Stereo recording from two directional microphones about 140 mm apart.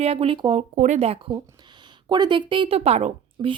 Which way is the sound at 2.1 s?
35° right (ahead or behind).